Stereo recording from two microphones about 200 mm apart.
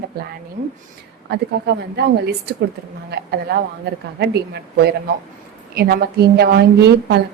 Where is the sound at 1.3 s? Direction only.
55° right (ahead or behind).